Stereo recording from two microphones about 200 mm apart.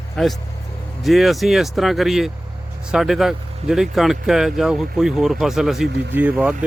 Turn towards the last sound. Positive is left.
turn(degrees=-5)  # may be behind; listen again after turning